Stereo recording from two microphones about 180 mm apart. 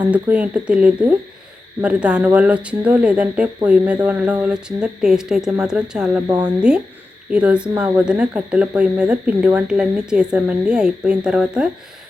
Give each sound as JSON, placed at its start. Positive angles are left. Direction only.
{"t": 0.1, "sound": "speech", "side_deg": -5}
{"t": 6.2, "sound": "speech", "side_deg": -20}
{"t": 6.6, "sound": "speech", "side_deg": -5}